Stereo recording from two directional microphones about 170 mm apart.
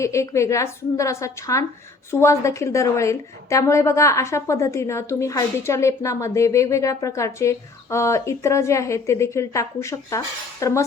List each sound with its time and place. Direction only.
0.0 s a woman's voice: 15° left (ahead or behind)